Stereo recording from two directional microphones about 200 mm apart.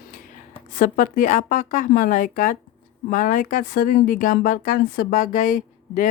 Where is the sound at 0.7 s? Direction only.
40° left (ahead or behind).